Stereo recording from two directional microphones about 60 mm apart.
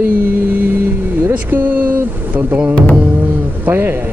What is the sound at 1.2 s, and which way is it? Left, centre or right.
Speech, right.